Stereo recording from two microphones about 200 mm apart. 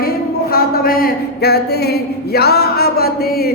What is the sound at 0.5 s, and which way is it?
Speech, 50° left (ahead or behind).